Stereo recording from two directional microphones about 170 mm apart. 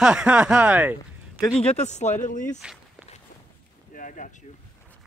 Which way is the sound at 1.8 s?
40° left (ahead or behind).